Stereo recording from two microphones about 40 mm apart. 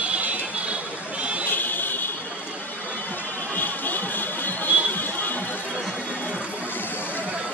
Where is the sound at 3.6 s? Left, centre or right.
Left.